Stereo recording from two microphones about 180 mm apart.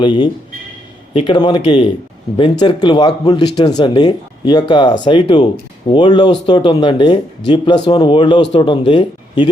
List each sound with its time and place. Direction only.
0.0 s speech: 25° left (ahead or behind)